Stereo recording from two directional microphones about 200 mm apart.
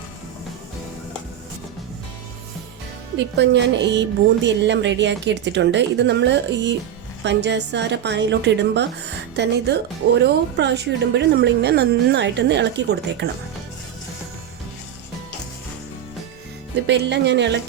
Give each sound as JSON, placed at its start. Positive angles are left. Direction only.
{"t": 3.3, "sound": "a woman's voice", "side_deg": -60}
{"t": 16.8, "sound": "a woman's voice", "side_deg": -60}